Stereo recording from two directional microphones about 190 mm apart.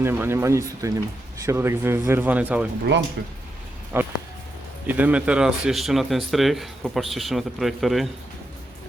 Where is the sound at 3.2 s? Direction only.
70° right (ahead or behind).